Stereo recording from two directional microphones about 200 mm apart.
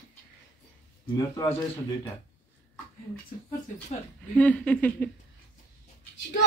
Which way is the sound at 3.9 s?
35° left (ahead or behind).